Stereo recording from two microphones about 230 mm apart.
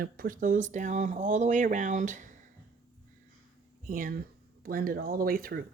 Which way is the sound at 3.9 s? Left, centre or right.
Right.